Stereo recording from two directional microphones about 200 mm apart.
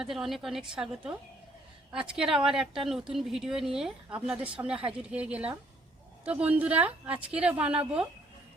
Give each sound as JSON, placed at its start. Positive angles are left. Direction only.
{"t": 0.0, "sound": "a woman's voice", "side_deg": 0}